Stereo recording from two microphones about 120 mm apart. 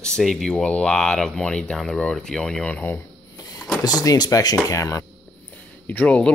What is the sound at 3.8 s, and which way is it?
Speech, 30° left (ahead or behind).